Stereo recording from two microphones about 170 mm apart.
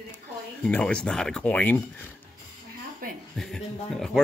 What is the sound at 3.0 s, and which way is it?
Chuckle, 55° right (ahead or behind).